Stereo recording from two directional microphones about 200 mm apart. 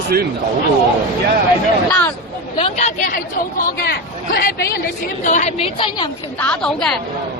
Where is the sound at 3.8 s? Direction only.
50° left (ahead or behind).